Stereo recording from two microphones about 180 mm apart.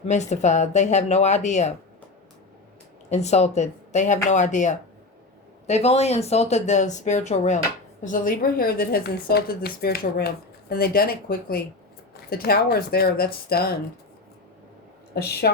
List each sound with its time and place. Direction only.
0.1 s speech: 40° left (ahead or behind)
3.1 s speech: 40° left (ahead or behind); by 13.7 s 60° left (ahead or behind)
15.1 s a woman's voice: 60° left (ahead or behind)